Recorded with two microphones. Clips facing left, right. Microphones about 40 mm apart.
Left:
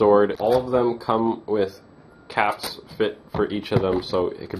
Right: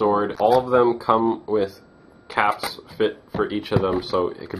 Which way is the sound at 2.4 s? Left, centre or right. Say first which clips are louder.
Right 3 dB; right.